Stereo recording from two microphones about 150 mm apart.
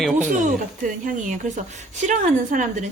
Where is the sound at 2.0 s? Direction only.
55° right (ahead or behind).